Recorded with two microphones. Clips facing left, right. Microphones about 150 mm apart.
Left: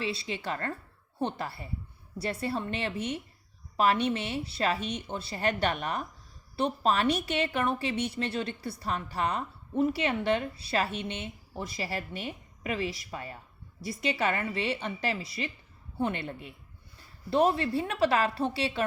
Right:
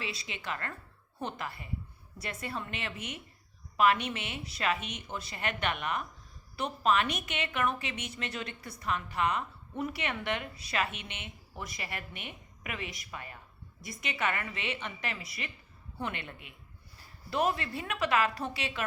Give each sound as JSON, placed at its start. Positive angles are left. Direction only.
{"t": 0.0, "sound": "a woman's voice", "side_deg": 30}